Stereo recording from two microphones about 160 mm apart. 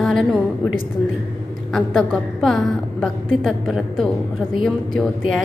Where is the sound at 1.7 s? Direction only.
5° left (ahead or behind).